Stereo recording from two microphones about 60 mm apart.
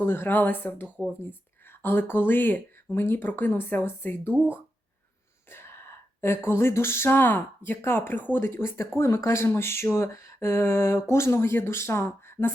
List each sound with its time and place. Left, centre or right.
0.0 s speech: left
5.5 s a sound: left
7.8 s speech: left